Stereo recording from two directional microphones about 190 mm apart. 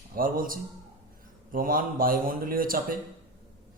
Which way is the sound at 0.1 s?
50° right (ahead or behind).